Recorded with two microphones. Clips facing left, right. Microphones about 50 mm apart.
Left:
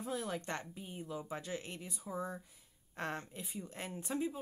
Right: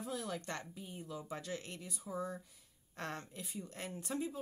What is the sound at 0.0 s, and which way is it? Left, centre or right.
Speech, left.